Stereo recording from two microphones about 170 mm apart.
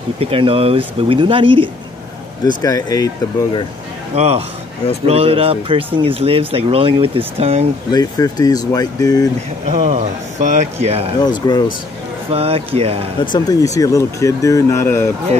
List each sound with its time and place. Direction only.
0.2 s speech: 35° right (ahead or behind)
2.4 s speech: 20° left (ahead or behind)
4.1 s speech: 35° right (ahead or behind)
7.9 s speech: 20° left (ahead or behind)
9.7 s speech: 45° right (ahead or behind)
11.2 s speech: 25° left (ahead or behind)
12.3 s speech: 35° right (ahead or behind)
13.2 s speech: 25° left (ahead or behind)